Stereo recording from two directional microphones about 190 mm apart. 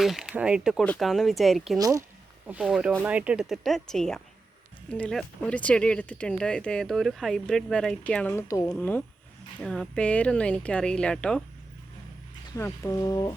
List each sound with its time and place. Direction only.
0.0 s speech: centre (ahead or behind)
1.8 s speech: 15° right (ahead or behind)
2.5 s speech: 5° right (ahead or behind)
12.5 s speech: 15° left (ahead or behind)